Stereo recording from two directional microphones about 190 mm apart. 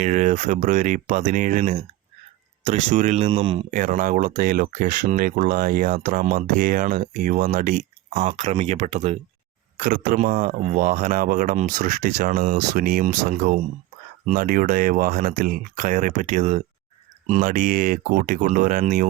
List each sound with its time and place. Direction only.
0.0 s speech: 40° right (ahead or behind)